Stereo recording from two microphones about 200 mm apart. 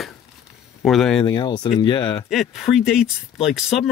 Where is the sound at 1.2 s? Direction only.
20° left (ahead or behind).